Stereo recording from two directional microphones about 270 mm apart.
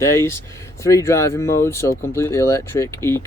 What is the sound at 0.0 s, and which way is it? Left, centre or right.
Speech, centre.